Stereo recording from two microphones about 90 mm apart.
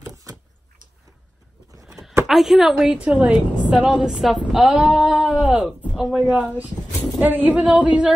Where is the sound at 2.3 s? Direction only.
5° right (ahead or behind).